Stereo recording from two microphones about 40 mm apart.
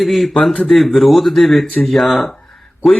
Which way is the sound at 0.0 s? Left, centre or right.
Centre.